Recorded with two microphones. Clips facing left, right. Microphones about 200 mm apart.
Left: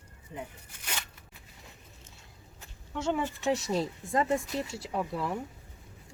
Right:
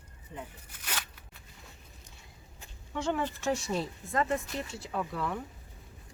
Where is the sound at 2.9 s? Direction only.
5° left (ahead or behind).